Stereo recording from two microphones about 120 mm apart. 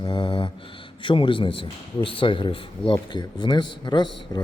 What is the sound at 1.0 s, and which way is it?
A man's voice, 45° left (ahead or behind).